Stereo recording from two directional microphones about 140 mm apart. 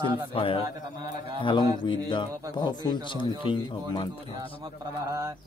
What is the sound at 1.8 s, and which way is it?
Speech, 35° left (ahead or behind).